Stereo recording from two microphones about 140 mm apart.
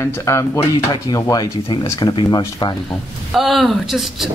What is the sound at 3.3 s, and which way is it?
Speech, centre (ahead or behind).